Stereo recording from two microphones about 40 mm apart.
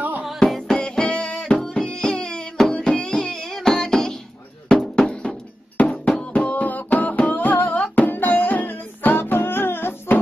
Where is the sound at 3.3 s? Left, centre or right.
Centre.